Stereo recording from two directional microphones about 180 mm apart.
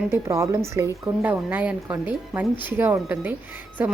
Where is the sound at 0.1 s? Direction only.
15° right (ahead or behind).